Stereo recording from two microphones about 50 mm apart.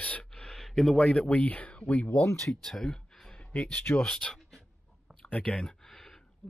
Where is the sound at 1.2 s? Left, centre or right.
Left.